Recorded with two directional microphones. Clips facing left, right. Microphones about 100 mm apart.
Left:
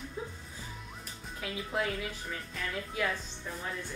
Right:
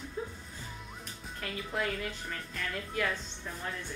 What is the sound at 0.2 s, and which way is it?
Music, 10° left (ahead or behind).